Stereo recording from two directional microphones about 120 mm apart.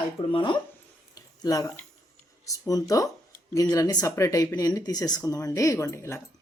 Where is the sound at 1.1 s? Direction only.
30° left (ahead or behind).